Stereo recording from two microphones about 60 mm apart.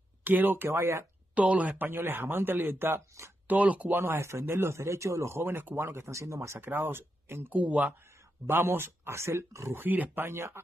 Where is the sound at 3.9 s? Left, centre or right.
Right.